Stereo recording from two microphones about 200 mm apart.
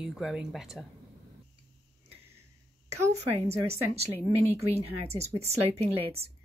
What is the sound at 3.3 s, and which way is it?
Speech, 30° right (ahead or behind).